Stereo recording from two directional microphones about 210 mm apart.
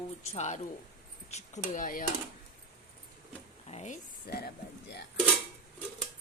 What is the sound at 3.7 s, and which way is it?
Speech, 35° left (ahead or behind).